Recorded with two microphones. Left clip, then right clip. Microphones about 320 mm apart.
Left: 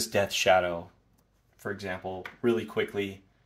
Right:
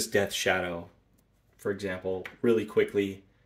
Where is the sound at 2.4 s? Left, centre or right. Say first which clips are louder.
Right 3 dB; centre.